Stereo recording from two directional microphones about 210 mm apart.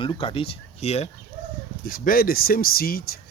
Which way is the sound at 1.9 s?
45° left (ahead or behind).